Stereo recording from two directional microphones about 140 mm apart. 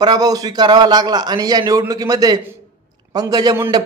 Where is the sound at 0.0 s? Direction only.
30° right (ahead or behind).